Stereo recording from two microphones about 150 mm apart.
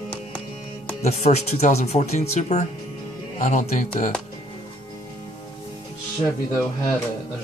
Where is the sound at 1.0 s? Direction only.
45° left (ahead or behind).